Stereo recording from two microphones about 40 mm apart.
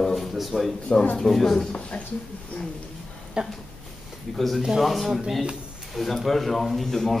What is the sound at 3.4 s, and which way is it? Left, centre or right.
Speech, right.